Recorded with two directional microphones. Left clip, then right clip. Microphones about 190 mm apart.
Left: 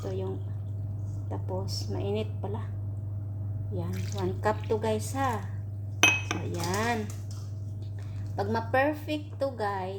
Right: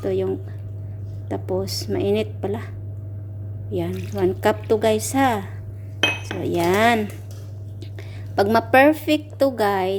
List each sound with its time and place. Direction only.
0.1 s speech: 40° right (ahead or behind)
3.8 s speech: 50° right (ahead or behind)
6.0 s dishes: 45° left (ahead or behind)
6.4 s a woman's voice: 45° right (ahead or behind)